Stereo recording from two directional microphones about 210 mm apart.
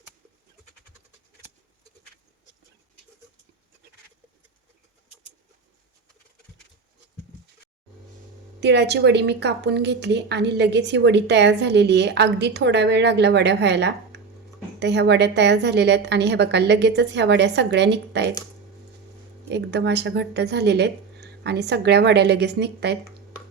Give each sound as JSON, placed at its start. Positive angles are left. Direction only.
{"t": 8.6, "sound": "a woman's voice", "side_deg": -55}
{"t": 19.5, "sound": "speech", "side_deg": -55}